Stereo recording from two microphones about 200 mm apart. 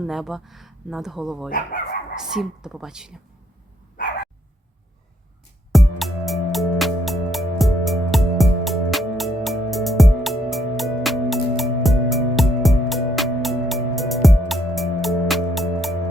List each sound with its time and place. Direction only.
0.0 s speech: centre (ahead or behind)
1.5 s speech: 45° left (ahead or behind)
2.1 s speech: centre (ahead or behind)
5.7 s music: centre (ahead or behind)